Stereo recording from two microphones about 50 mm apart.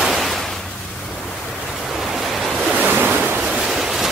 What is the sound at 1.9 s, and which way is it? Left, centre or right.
Waves, centre.